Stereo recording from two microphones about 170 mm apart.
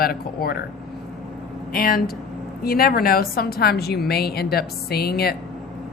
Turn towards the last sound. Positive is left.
turn(degrees=65)  # may be behind; listen again after turning